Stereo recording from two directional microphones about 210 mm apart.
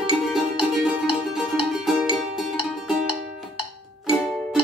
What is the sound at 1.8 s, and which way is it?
Music, centre (ahead or behind).